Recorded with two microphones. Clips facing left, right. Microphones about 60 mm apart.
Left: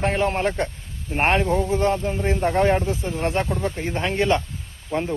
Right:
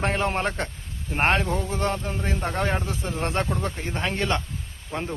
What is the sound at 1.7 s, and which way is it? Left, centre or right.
Speech, centre.